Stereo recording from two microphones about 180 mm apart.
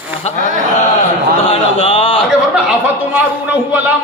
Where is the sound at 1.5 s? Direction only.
30° left (ahead or behind).